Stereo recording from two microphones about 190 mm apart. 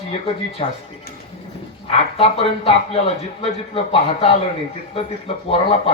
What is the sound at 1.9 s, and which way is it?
A man's voice, 30° left (ahead or behind).